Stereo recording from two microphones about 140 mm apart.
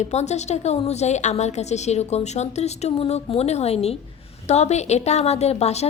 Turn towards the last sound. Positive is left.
turn(degrees=50)  # may be behind; listen again after turning